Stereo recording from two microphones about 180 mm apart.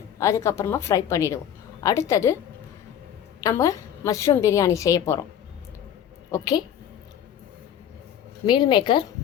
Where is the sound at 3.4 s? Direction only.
20° left (ahead or behind).